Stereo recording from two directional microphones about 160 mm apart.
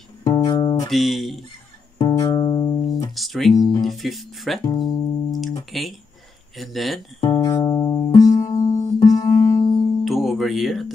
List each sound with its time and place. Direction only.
0.2 s music: 30° left (ahead or behind)
0.8 s speech: centre (ahead or behind)
2.0 s music: 30° left (ahead or behind)
3.2 s speech: centre (ahead or behind)
3.5 s speech: 25° left (ahead or behind)
3.8 s speech: centre (ahead or behind)
4.6 s music: 25° left (ahead or behind)
5.7 s speech: centre (ahead or behind)
7.2 s music: 30° left (ahead or behind)
10.0 s music: centre (ahead or behind)